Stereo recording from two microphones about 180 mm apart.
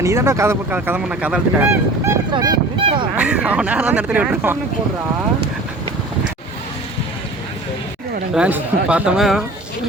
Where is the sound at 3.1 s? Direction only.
5° right (ahead or behind).